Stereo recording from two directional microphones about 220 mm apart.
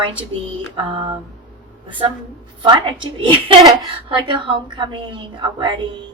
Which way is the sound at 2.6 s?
20° right (ahead or behind).